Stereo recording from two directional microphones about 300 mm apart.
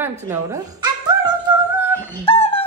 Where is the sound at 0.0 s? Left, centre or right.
Centre.